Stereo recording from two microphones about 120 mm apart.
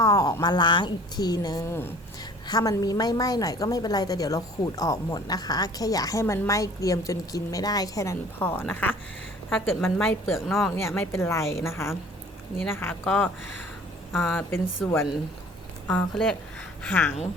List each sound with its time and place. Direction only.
0.0 s a woman's voice: 30° left (ahead or behind)
10.3 s speech: centre (ahead or behind)
10.7 s a woman's voice: 20° left (ahead or behind)